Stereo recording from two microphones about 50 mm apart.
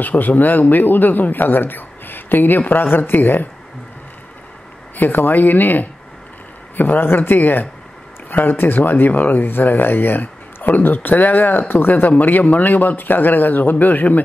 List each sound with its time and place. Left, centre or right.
0.0 s speech: left
4.9 s speech: left